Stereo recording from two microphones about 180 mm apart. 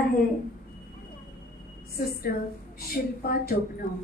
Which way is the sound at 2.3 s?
55° left (ahead or behind).